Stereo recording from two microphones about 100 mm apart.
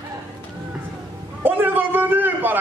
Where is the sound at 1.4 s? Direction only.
20° right (ahead or behind).